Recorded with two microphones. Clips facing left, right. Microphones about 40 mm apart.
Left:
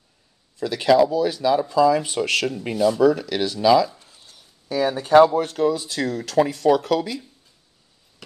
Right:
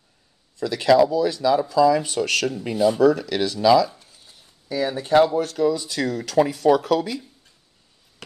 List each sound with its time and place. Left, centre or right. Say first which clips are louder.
0.6 s speech: even; centre
1.7 s speech: even; left
3.0 s speech: even; centre
4.6 s speech: left 2 dB; left
5.5 s speech: even; left
5.9 s speech: even; centre